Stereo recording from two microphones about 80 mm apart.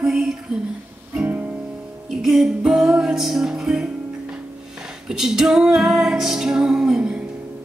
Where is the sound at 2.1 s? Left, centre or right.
Centre.